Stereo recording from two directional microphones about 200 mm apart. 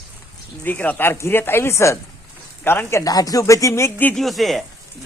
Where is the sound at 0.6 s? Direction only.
10° left (ahead or behind).